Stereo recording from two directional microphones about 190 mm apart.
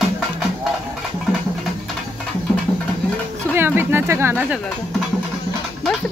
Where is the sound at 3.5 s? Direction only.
10° right (ahead or behind).